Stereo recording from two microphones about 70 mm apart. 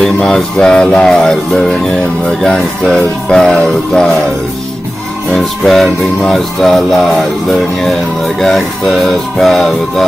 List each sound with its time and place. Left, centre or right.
0.0 s music: centre
5.3 s music: centre